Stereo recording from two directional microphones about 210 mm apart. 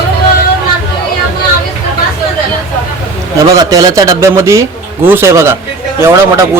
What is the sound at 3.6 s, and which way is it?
Speech, 20° right (ahead or behind).